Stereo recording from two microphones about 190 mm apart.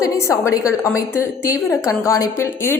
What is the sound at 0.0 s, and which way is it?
A woman's voice, 15° left (ahead or behind).